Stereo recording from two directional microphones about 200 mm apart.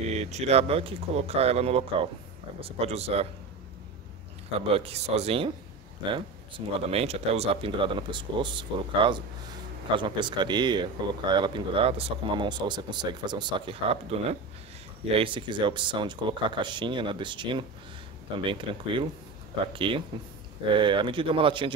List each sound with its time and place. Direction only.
0.1 s speech: 35° right (ahead or behind)
4.6 s speech: 30° right (ahead or behind)
6.9 s speech: 30° right (ahead or behind)